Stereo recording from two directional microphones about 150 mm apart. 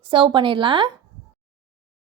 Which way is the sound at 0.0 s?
35° right (ahead or behind).